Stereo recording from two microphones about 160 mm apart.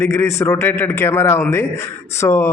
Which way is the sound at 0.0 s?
15° left (ahead or behind).